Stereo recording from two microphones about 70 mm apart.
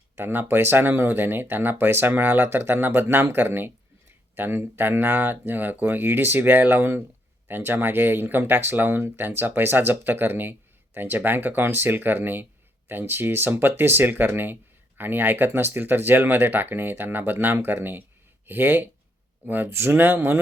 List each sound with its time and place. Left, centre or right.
0.2 s speech: right